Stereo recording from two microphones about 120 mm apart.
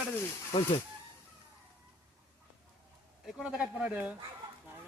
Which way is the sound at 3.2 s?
5° right (ahead or behind).